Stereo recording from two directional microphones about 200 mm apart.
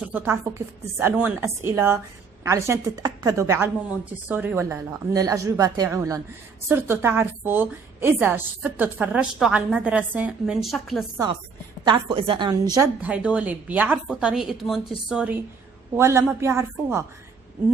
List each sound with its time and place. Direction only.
0.1 s a woman's voice: 10° right (ahead or behind)
11.8 s a woman's voice: 25° right (ahead or behind)
12.8 s a woman's voice: 5° right (ahead or behind)